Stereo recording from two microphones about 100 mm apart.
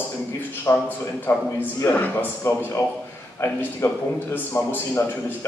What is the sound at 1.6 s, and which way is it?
Speech, 20° left (ahead or behind).